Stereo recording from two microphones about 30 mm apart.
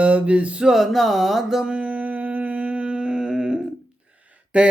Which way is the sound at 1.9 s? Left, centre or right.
Right.